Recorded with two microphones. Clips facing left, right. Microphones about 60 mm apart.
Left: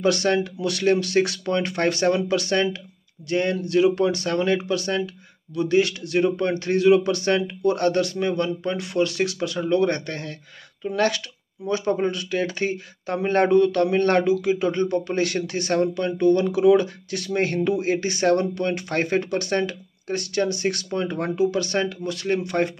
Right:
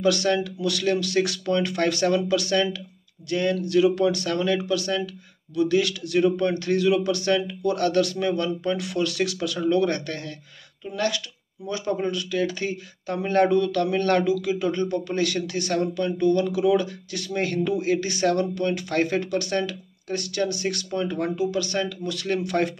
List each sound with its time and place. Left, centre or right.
0.0 s speech: left
10.9 s speech: left